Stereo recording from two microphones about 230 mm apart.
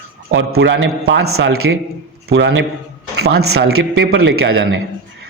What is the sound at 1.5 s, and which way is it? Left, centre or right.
Speech, right.